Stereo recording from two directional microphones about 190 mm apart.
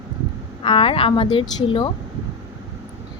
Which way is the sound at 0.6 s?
30° left (ahead or behind).